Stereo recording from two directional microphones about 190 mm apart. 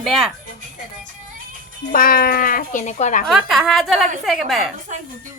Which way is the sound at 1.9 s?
50° left (ahead or behind).